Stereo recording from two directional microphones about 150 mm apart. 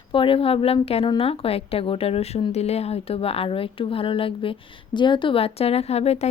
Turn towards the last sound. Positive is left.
turn(degrees=45)  # may be behind; listen again after turning